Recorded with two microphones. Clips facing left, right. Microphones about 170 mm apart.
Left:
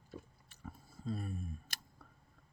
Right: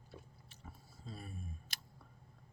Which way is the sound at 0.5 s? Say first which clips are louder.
Left 6 dB; 50° left (ahead or behind).